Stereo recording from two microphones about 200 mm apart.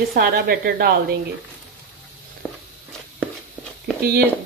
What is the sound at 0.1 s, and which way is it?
Speech, 50° right (ahead or behind).